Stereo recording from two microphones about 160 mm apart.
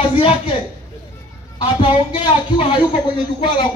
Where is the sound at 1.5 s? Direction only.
30° left (ahead or behind).